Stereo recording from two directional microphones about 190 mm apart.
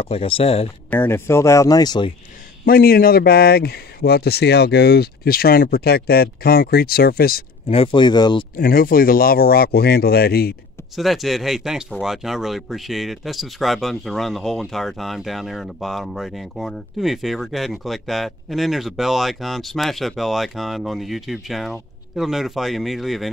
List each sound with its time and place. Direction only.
0.0 s speech: 30° left (ahead or behind)
0.8 s speech: 10° left (ahead or behind)
2.6 s speech: 50° left (ahead or behind)
7.6 s speech: 30° left (ahead or behind)
8.5 s speech: 50° left (ahead or behind)
11.0 s speech: centre (ahead or behind)